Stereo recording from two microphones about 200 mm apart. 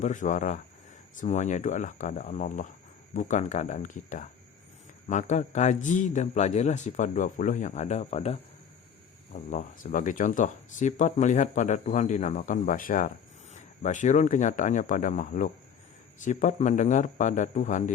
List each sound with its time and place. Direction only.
0.0 s speech: 40° left (ahead or behind)